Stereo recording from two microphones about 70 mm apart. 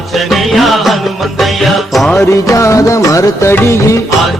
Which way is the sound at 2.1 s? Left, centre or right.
Left.